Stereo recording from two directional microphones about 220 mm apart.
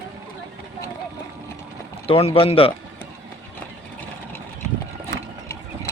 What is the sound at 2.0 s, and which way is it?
Speech, 25° left (ahead or behind).